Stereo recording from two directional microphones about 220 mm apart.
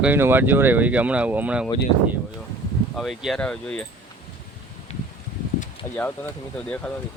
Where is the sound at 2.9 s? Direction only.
Centre (ahead or behind).